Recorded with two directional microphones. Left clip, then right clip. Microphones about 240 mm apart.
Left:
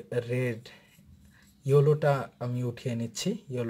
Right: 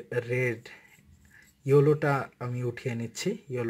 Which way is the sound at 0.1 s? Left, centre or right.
Centre.